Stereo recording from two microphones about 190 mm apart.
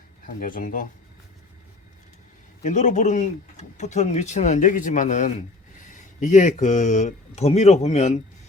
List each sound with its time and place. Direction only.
0.3 s speech: 45° left (ahead or behind)
2.6 s speech: 40° left (ahead or behind)